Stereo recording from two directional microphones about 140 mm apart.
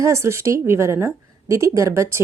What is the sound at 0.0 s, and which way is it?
A woman's voice, 20° right (ahead or behind).